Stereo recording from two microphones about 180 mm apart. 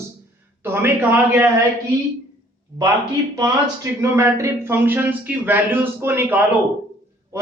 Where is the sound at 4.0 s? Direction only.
15° right (ahead or behind).